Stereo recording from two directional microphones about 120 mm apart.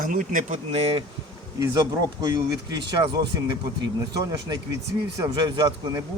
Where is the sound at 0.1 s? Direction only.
90° right.